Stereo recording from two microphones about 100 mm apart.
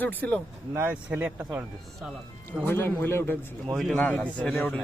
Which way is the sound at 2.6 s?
20° left (ahead or behind).